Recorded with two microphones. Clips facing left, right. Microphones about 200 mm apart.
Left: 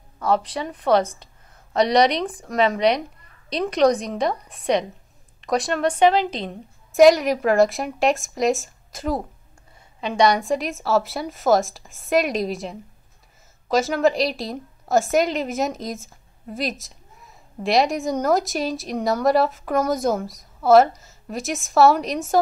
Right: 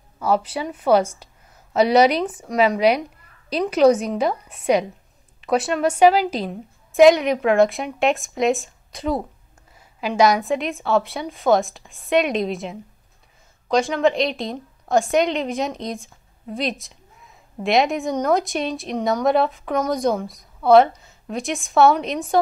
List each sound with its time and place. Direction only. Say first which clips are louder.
0.2 s a woman's voice: right 1 dB; 5° right (ahead or behind)